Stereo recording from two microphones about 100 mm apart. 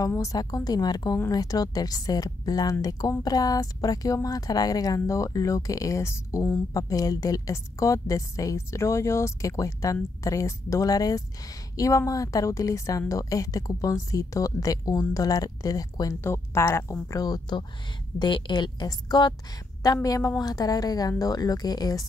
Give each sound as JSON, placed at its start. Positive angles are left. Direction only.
{"t": 0.1, "sound": "a woman's voice", "side_deg": 35}
{"t": 16.2, "sound": "speech", "side_deg": 25}
{"t": 17.1, "sound": "a woman's voice", "side_deg": 40}